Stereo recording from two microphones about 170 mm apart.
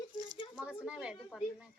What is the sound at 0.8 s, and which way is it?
Speech, 5° right (ahead or behind).